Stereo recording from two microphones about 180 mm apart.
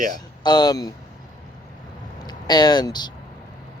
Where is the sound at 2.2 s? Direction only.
25° left (ahead or behind).